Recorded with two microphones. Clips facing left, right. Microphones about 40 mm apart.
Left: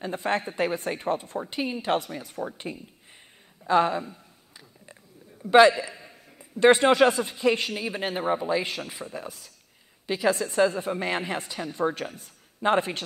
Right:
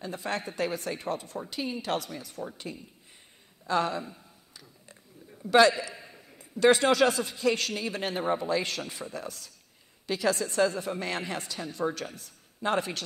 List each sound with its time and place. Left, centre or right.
0.0 s speech: left
5.4 s a man's voice: left